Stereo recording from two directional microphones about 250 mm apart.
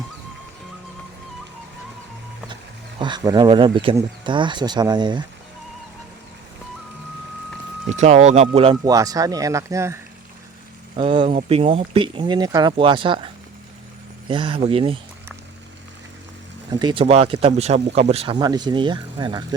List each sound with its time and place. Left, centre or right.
3.0 s speech: centre
7.9 s speech: right
16.7 s speech: centre